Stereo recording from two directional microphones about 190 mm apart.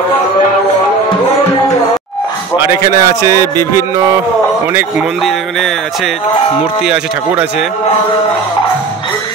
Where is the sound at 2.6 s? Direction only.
15° right (ahead or behind).